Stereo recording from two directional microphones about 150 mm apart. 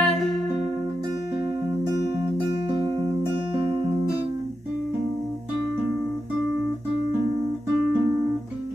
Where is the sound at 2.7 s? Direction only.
40° right (ahead or behind).